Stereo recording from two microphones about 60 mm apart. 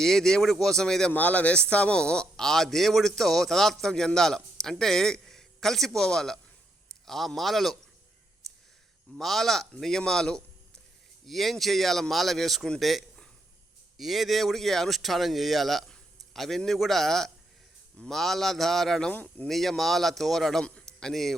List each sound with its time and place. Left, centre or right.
0.0 s a man's voice: centre
1.1 s a man's voice: left; by 7.8 s centre
9.1 s a man's voice: centre
19.1 s speech: left
19.5 s speech: centre
20.7 s a sound: centre
21.1 s speech: centre